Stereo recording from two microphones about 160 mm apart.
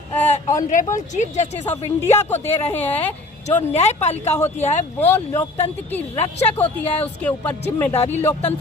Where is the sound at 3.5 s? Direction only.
45° left (ahead or behind).